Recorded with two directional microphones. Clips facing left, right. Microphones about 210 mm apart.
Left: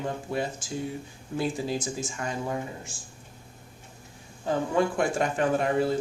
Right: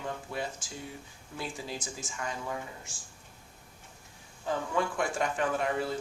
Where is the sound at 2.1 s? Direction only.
35° left (ahead or behind).